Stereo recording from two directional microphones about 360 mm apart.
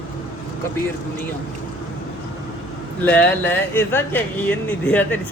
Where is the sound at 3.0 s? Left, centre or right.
Centre.